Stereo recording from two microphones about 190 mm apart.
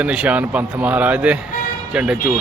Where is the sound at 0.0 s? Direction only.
5° right (ahead or behind).